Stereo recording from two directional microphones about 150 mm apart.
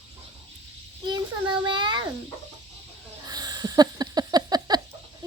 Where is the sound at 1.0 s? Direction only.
30° right (ahead or behind).